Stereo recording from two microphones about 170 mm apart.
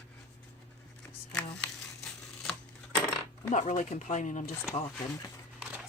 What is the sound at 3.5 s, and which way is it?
Speech, 45° left (ahead or behind).